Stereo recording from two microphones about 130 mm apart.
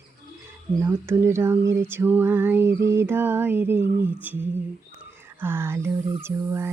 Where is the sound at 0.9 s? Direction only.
20° right (ahead or behind).